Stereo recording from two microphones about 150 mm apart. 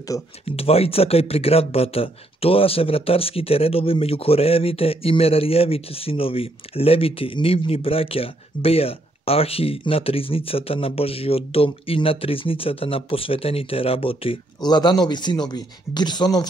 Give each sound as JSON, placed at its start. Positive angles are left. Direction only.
{"t": 0.1, "sound": "speech", "side_deg": 20}
{"t": 0.5, "sound": "speech", "side_deg": 40}